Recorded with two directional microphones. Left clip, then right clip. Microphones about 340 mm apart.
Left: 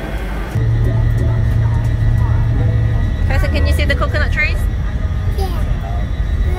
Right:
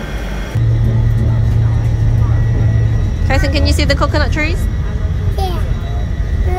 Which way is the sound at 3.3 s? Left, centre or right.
Centre.